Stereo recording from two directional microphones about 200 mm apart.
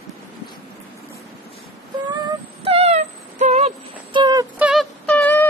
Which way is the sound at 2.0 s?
25° right (ahead or behind).